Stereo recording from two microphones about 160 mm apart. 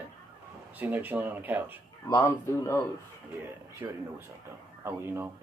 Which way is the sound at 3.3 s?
15° right (ahead or behind).